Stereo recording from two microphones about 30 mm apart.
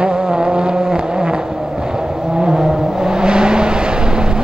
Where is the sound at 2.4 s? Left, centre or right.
Centre.